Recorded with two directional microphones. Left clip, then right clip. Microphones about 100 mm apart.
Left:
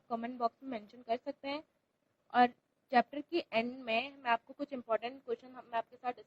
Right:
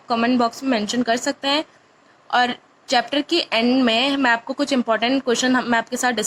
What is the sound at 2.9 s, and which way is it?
A woman's voice, 25° right (ahead or behind).